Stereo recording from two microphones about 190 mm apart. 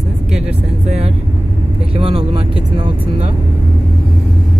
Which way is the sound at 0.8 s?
35° right (ahead or behind).